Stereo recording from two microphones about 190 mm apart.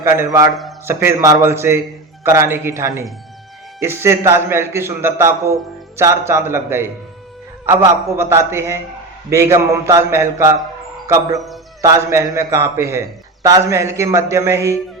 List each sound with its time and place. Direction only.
0.0 s a man's voice: 15° right (ahead or behind)
11.3 s music: centre (ahead or behind)
11.8 s a man's voice: 15° right (ahead or behind)